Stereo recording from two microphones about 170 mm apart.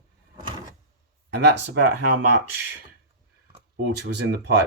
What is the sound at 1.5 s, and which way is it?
Speech, 90° right.